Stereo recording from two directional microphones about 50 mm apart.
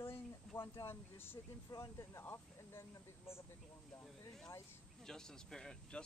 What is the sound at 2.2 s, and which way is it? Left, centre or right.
Speech, left.